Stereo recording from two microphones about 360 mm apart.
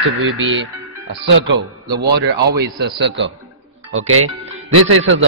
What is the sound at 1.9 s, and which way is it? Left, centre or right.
Speech, right.